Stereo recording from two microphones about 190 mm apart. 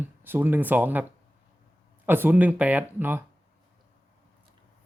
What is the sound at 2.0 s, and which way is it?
Speech, 10° right (ahead or behind).